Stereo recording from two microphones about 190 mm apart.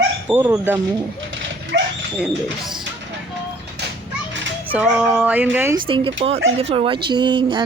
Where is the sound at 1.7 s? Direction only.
55° right (ahead or behind).